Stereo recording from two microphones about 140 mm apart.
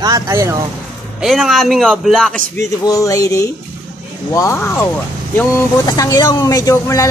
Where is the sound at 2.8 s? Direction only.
25° left (ahead or behind).